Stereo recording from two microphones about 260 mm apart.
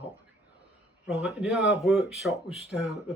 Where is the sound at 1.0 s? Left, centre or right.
Centre.